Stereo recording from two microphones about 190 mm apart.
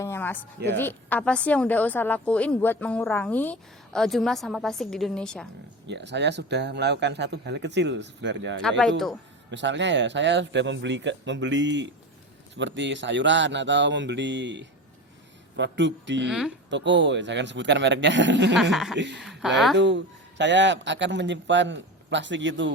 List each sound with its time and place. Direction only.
0.0 s a sound: 10° left (ahead or behind)
0.8 s a woman's voice: 10° left (ahead or behind)
5.9 s speech: 65° right (ahead or behind)
8.8 s speech: centre (ahead or behind)
9.5 s speech: 70° right (ahead or behind)
18.5 s speech: centre (ahead or behind)
18.9 s speech: 70° right (ahead or behind)
19.2 s a sound: centre (ahead or behind)
19.7 s speech: 70° right (ahead or behind)